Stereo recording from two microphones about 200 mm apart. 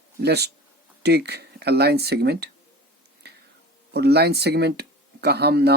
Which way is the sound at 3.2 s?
55° right (ahead or behind).